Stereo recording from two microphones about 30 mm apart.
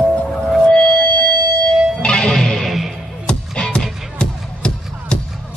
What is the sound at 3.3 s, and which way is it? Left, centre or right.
Music, left.